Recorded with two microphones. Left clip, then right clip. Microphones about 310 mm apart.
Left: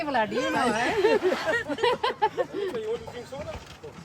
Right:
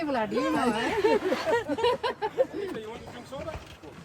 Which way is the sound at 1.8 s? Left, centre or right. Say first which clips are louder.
Left 6 dB; centre.